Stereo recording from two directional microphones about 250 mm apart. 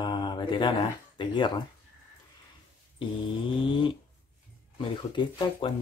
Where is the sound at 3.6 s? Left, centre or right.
Centre.